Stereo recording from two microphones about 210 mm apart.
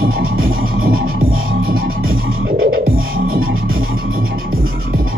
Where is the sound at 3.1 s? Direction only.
45° right (ahead or behind).